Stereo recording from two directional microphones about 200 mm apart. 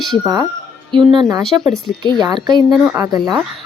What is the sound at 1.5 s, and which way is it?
Speech, 15° right (ahead or behind).